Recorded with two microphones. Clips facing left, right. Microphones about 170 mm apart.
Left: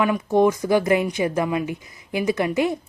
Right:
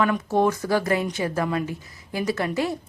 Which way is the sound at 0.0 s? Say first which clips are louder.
Left 3 dB; 15° left (ahead or behind).